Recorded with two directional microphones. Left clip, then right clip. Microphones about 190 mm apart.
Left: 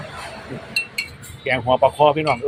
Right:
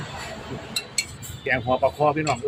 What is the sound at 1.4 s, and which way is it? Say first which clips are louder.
Speech: left 5 dB; 15° left (ahead or behind).